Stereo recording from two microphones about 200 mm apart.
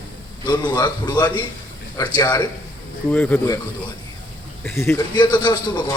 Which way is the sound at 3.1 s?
10° left (ahead or behind).